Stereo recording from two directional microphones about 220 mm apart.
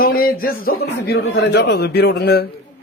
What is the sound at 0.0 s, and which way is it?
Speech, 40° left (ahead or behind).